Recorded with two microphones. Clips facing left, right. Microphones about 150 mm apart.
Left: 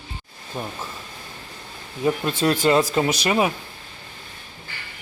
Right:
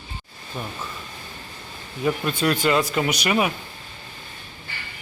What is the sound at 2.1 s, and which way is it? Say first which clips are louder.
Speech: left 2 dB; 25° left (ahead or behind).